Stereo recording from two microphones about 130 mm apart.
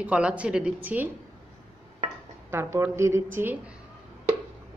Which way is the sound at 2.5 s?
20° right (ahead or behind).